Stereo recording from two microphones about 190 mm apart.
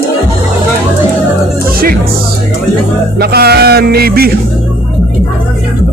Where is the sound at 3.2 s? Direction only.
55° right (ahead or behind).